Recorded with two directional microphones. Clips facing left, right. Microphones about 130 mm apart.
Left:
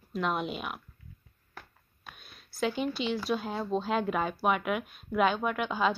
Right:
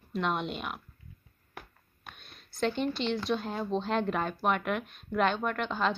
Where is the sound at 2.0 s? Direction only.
5° left (ahead or behind).